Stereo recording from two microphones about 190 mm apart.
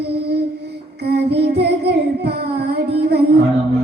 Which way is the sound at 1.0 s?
60° right (ahead or behind).